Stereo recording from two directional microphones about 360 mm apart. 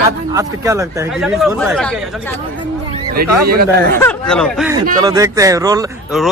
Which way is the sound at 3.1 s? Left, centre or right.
Right.